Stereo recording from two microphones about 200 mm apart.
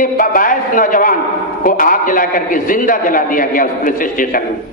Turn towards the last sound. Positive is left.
turn(degrees=45)  # may be behind; listen again after turning